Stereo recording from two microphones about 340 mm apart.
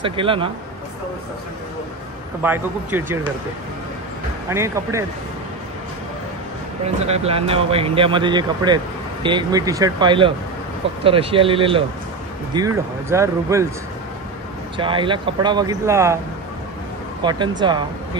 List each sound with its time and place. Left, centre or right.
0.0 s speech: centre
2.4 s speech: centre
4.5 s speech: centre
7.1 s speech: centre
14.8 s speech: centre
17.2 s speech: centre